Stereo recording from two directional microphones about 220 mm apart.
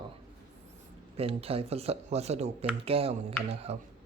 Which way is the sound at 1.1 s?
25° right (ahead or behind).